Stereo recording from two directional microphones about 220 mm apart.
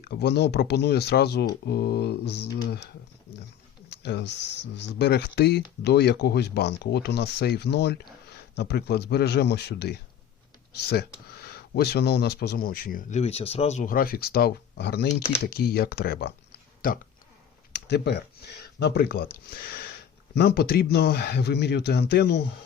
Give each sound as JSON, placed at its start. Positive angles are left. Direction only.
{"t": 0.0, "sound": "speech", "side_deg": 50}
{"t": 4.0, "sound": "speech", "side_deg": 50}